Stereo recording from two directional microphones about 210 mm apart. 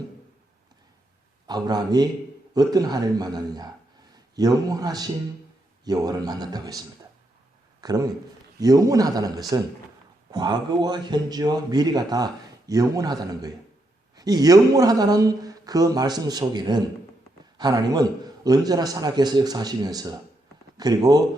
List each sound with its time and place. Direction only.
1.5 s a man's voice: 20° right (ahead or behind)